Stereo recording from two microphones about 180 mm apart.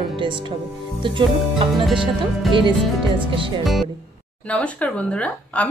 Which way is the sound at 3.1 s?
30° right (ahead or behind).